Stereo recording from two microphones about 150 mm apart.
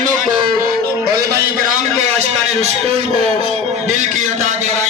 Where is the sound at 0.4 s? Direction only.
80° right.